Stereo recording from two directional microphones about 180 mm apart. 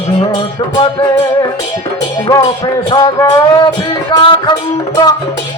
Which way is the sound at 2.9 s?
20° left (ahead or behind).